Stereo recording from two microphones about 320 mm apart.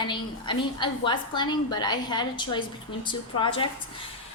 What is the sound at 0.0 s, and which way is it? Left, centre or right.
A woman's voice, centre.